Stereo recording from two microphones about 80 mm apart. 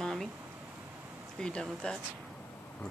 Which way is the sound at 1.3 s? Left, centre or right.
Centre.